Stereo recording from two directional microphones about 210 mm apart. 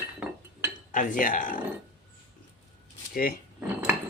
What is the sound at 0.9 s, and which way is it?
Speech, 40° left (ahead or behind).